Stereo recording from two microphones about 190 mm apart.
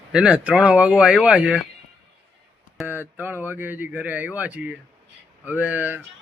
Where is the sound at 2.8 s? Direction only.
10° right (ahead or behind).